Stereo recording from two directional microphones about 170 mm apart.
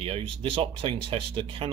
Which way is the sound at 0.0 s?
35° right (ahead or behind).